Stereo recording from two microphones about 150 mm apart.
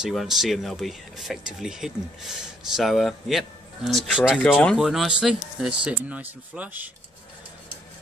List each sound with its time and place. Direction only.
0.0 s speech: centre (ahead or behind)